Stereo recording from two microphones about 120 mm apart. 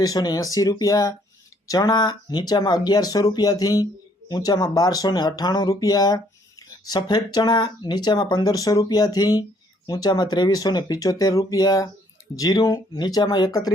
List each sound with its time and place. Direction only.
0.0 s speech: 30° left (ahead or behind)